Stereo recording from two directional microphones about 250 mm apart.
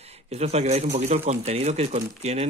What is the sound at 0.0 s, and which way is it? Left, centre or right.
A man's voice, right.